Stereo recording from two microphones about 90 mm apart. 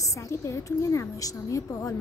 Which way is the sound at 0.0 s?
35° left (ahead or behind).